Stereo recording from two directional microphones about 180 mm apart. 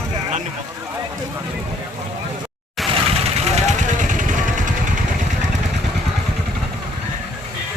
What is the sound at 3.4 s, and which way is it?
Vehicle, 40° right (ahead or behind).